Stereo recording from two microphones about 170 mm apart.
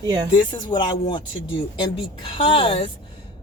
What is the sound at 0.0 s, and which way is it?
Speech, 25° right (ahead or behind).